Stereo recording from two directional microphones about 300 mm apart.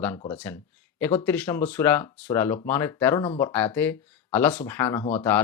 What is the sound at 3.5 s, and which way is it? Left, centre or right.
Speech, centre.